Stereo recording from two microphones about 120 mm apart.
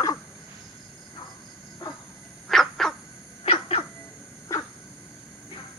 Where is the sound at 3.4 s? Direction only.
55° left (ahead or behind).